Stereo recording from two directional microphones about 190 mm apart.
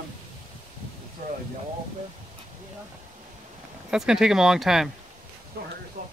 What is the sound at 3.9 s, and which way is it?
Speech, 5° right (ahead or behind).